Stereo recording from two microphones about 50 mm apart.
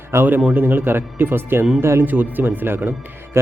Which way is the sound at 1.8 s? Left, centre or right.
Right.